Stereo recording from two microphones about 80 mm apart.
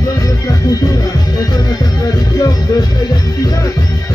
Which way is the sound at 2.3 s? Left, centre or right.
Left.